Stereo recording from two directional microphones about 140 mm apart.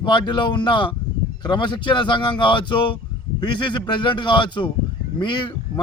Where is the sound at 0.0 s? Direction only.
35° left (ahead or behind).